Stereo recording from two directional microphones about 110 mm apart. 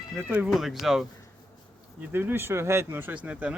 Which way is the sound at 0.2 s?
10° right (ahead or behind).